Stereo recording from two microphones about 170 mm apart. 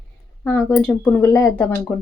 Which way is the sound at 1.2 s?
15° left (ahead or behind).